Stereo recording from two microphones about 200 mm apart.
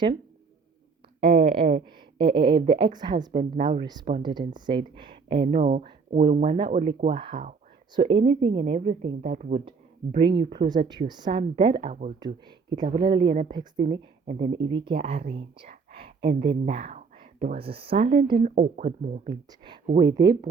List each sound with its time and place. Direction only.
1.2 s a woman's voice: 30° right (ahead or behind)
10.1 s a woman's voice: 25° right (ahead or behind)
12.2 s a woman's voice: 20° right (ahead or behind)
15.9 s a sound: 30° right (ahead or behind)
16.3 s speech: 45° right (ahead or behind)
16.6 s a woman's voice: 35° right (ahead or behind)
19.5 s a woman's voice: 20° right (ahead or behind)